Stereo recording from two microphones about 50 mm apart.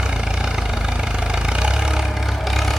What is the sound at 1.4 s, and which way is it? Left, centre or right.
Vehicle, centre.